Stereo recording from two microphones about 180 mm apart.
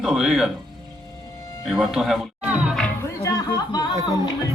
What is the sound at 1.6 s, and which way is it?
Speech, centre (ahead or behind).